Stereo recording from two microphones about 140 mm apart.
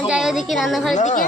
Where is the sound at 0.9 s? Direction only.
60° left (ahead or behind).